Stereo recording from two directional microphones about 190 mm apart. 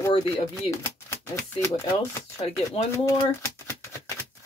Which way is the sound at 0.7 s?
15° left (ahead or behind).